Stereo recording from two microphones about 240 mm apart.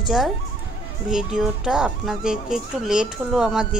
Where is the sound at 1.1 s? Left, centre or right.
Centre.